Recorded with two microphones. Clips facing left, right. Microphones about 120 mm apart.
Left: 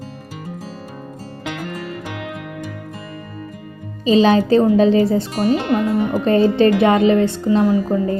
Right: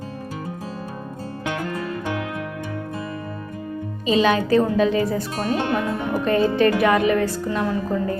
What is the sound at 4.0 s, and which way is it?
A woman's voice, 30° left (ahead or behind).